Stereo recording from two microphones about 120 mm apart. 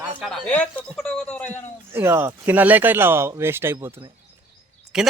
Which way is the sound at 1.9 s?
20° right (ahead or behind).